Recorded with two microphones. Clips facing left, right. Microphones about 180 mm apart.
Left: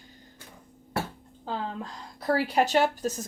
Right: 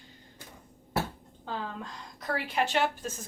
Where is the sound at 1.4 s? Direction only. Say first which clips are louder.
Left 3 dB; 35° left (ahead or behind).